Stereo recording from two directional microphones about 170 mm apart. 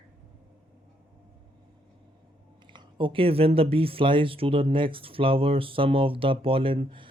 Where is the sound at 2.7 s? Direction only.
30° right (ahead or behind).